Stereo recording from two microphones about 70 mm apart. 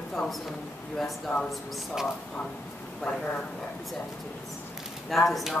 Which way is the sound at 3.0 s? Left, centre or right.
Centre.